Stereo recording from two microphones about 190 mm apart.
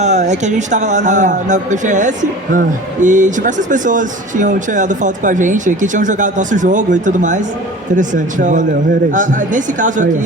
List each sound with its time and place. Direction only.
0.0 s speech: 40° right (ahead or behind)